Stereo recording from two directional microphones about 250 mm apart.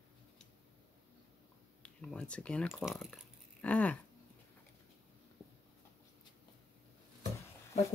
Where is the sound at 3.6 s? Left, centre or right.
Centre.